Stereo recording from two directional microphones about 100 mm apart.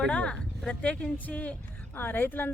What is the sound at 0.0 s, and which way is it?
A woman's voice, 10° left (ahead or behind).